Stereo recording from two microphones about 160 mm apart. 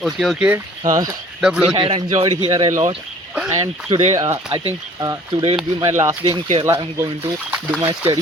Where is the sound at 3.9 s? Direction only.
45° right (ahead or behind).